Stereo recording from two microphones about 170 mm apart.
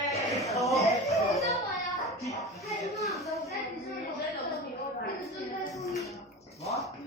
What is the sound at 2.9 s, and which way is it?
Speech, centre (ahead or behind).